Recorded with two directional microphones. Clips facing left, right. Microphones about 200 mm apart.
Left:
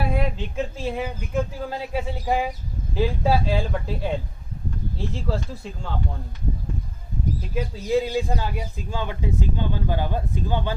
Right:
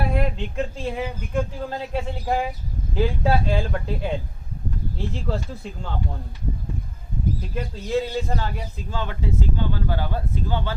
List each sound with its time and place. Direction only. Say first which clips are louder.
0.1 s a man's voice: right 1 dB; centre (ahead or behind)
7.5 s a man's voice: left 3 dB; 10° left (ahead or behind)